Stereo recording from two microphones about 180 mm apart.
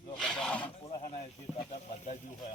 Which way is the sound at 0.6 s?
30° left (ahead or behind).